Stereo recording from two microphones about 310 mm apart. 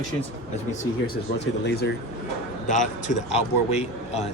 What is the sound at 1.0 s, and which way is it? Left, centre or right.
Speech, left.